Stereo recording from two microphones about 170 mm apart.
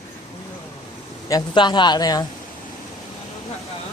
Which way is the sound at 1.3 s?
25° left (ahead or behind).